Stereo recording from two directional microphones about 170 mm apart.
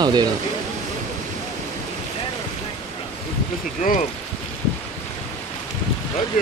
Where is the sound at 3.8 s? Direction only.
45° left (ahead or behind).